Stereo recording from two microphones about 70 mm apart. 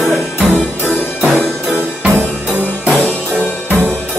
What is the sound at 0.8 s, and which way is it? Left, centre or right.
Music, left.